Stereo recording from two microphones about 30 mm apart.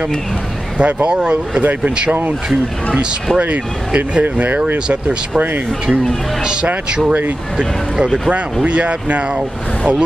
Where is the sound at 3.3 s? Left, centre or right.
Right.